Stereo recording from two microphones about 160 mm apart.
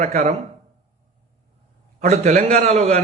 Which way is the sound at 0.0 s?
45° right (ahead or behind).